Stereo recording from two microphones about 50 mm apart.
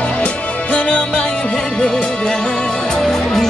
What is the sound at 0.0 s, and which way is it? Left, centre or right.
Music, left.